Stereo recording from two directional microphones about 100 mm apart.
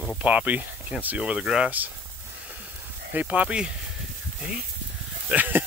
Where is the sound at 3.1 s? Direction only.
15° right (ahead or behind).